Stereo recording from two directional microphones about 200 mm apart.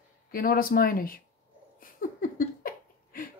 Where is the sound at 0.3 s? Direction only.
45° left (ahead or behind).